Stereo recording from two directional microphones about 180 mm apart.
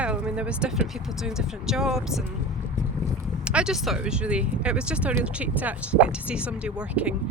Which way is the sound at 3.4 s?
5° right (ahead or behind).